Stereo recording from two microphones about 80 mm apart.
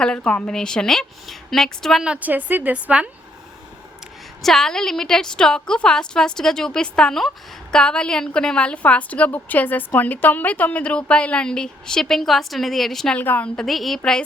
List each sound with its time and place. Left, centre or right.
0.0 s a woman's voice: centre
2.0 s a woman's voice: centre
4.4 s a woman's voice: centre
13.1 s a woman's voice: left
13.6 s a woman's voice: centre